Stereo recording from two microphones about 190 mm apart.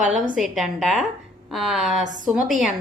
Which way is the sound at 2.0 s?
40° right (ahead or behind).